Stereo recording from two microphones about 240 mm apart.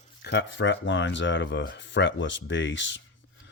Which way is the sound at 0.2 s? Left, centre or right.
Left.